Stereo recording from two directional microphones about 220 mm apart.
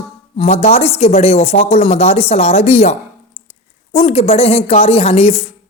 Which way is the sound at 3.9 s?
25° left (ahead or behind).